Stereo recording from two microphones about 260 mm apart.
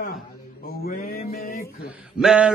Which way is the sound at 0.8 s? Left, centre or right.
Left.